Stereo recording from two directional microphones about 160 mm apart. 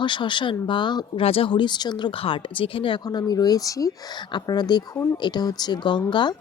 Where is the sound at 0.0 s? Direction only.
30° left (ahead or behind).